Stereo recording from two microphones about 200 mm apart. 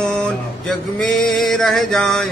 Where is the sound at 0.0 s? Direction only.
5° left (ahead or behind).